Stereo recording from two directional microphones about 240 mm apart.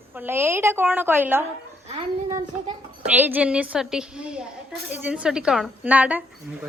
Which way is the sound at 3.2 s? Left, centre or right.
Centre.